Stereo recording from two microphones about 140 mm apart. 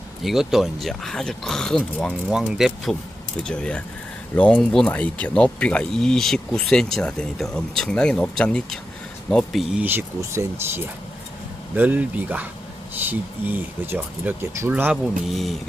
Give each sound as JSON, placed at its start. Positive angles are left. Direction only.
{"t": 0.2, "sound": "speech", "side_deg": 0}
{"t": 9.8, "sound": "speech", "side_deg": -15}
{"t": 11.7, "sound": "speech", "side_deg": -10}